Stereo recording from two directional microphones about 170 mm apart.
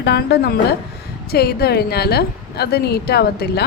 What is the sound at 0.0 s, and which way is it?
A woman's voice, 70° left (ahead or behind).